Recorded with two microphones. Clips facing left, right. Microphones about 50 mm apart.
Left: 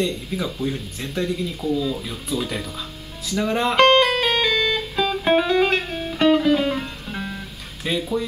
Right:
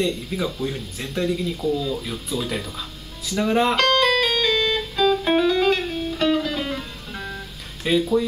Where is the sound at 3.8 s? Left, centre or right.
Left.